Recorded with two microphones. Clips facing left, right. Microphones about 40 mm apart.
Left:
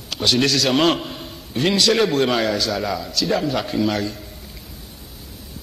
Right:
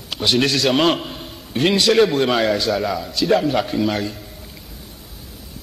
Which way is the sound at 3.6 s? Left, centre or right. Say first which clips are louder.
Even; centre.